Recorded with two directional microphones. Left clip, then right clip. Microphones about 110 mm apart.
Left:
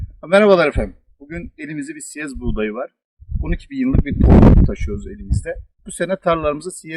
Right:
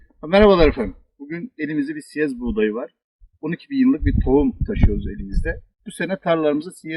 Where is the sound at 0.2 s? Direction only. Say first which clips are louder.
Left 1 dB; 45° left (ahead or behind).